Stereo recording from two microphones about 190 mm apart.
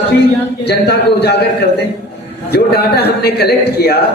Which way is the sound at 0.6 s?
60° left (ahead or behind).